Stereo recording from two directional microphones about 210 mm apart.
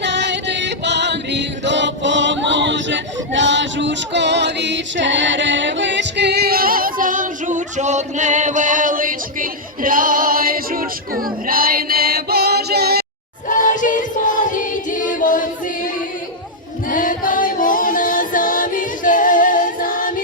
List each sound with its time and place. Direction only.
0.0 s music: 55° right (ahead or behind)
13.5 s music: 40° left (ahead or behind)
16.9 s music: 40° left (ahead or behind)